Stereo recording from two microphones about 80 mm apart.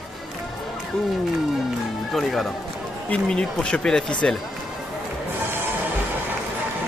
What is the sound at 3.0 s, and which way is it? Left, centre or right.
Speech, centre.